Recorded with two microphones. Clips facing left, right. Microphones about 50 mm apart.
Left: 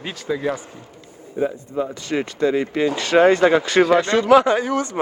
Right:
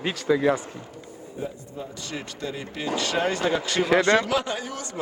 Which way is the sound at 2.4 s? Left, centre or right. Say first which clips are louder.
Left 13 dB; left.